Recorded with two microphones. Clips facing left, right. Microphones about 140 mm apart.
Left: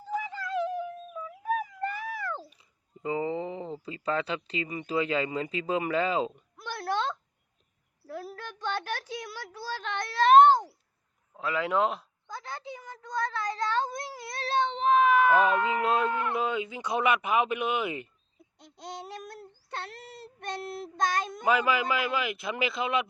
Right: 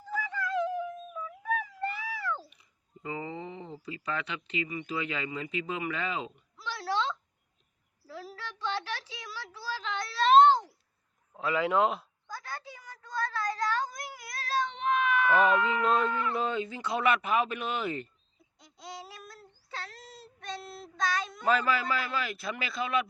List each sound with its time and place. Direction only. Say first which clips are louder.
0.1 s a sound: left 1 dB; 25° left (ahead or behind); by 2.4 s 50° left (ahead or behind)
2.5 s speech: left 2 dB; 25° left (ahead or behind)
6.6 s a sound: left 1 dB; 55° left (ahead or behind)
11.3 s a man's voice: right 1 dB; centre (ahead or behind)
12.3 s cat: left 3 dB; 20° left (ahead or behind); by 15.3 s 35° left (ahead or behind)
15.4 s speech: even; 45° left (ahead or behind)
15.8 s speech: left 1 dB; 5° left (ahead or behind)
19.0 s child singing: left 7 dB; 60° left (ahead or behind)
21.4 s speech: left 2 dB; 15° left (ahead or behind)